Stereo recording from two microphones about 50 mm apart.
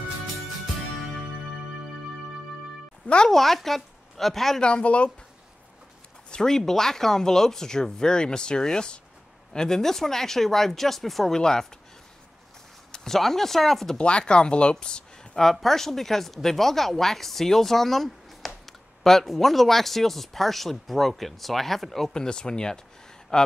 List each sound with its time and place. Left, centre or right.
3.3 s a woman's voice: centre
4.6 s speech: centre
6.3 s speech: centre
11.3 s speech: centre
12.9 s speech: centre
13.9 s speech: left
15.4 s speech: centre
22.1 s speech: centre